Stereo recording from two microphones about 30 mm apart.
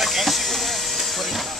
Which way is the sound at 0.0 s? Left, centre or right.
Centre.